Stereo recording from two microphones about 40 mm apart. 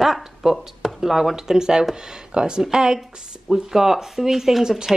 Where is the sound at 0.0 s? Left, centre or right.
Centre.